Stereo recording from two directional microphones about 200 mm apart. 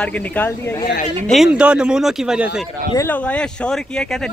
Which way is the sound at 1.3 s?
5° right (ahead or behind).